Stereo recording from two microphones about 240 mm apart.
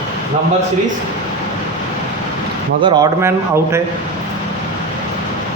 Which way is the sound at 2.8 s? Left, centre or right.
Centre.